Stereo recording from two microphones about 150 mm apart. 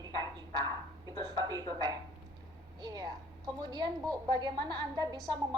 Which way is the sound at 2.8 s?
25° right (ahead or behind).